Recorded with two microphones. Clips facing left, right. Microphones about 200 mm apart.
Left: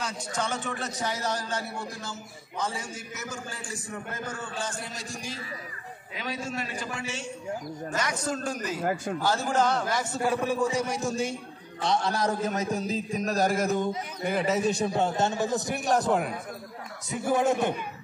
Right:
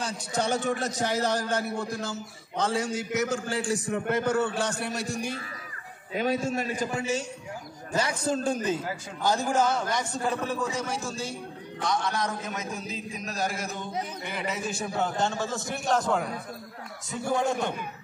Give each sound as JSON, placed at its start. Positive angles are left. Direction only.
{"t": 0.0, "sound": "a man's voice", "side_deg": -35}
{"t": 6.1, "sound": "a man's voice", "side_deg": -45}
{"t": 7.9, "sound": "a man's voice", "side_deg": -30}
{"t": 9.2, "sound": "a man's voice", "side_deg": -15}
{"t": 14.9, "sound": "a man's voice", "side_deg": 25}